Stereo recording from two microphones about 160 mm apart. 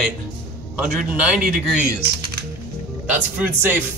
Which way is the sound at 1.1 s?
5° right (ahead or behind).